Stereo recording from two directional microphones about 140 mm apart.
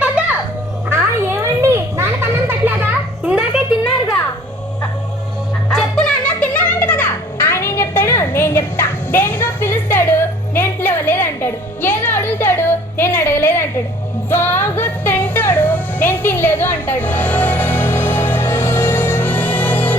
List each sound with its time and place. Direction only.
0.9 s children playing: 20° right (ahead or behind)
5.7 s music: 5° left (ahead or behind)